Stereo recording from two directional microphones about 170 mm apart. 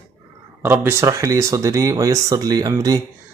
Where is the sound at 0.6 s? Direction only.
15° right (ahead or behind).